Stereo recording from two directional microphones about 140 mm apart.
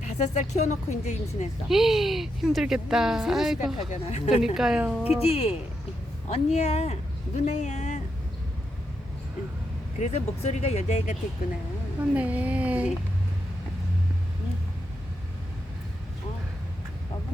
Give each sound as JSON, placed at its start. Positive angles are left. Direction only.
{"t": 0.1, "sound": "speech", "side_deg": 55}
{"t": 1.6, "sound": "a woman's voice", "side_deg": 0}
{"t": 3.8, "sound": "speech", "side_deg": 55}
{"t": 4.5, "sound": "a woman's voice", "side_deg": -5}
{"t": 5.2, "sound": "speech", "side_deg": 45}
{"t": 10.0, "sound": "speech", "side_deg": 50}
{"t": 12.1, "sound": "speech", "side_deg": -10}